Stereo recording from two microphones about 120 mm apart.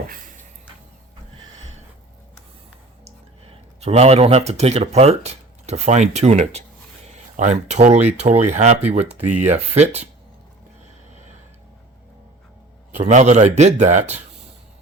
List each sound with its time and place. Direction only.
3.8 s speech: 60° right (ahead or behind)
7.3 s speech: 80° right
13.0 s speech: 75° right (ahead or behind)